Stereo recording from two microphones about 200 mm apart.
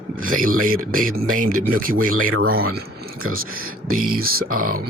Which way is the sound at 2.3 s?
90° right.